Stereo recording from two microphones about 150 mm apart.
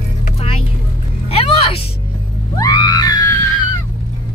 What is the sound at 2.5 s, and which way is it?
Screaming, 25° left (ahead or behind).